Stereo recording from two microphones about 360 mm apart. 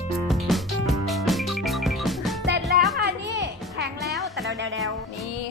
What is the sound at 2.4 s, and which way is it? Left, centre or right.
Music, right.